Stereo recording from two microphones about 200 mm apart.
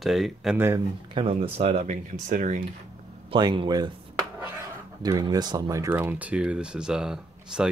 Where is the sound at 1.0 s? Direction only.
25° right (ahead or behind).